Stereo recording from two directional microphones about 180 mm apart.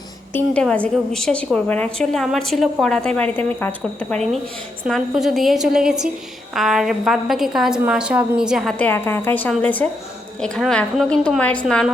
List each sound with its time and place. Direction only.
0.3 s a woman's voice: 5° left (ahead or behind)
8.8 s a woman's voice: 10° left (ahead or behind)